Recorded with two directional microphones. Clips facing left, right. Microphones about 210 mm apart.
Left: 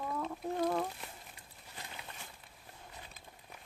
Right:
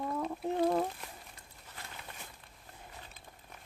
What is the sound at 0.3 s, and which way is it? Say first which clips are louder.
Speech: right 4 dB; 25° right (ahead or behind).